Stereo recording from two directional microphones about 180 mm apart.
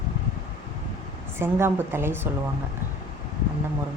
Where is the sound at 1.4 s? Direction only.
15° right (ahead or behind).